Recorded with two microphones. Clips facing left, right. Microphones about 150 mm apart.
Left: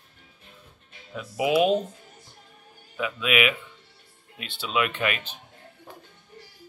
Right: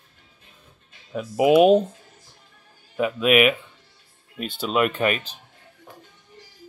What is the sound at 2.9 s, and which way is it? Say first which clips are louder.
Speech: right 7 dB; 45° right (ahead or behind).